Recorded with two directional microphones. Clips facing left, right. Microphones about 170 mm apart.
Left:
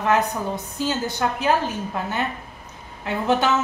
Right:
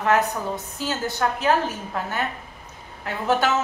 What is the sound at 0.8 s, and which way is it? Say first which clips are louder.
Speech: left 1 dB; 15° left (ahead or behind).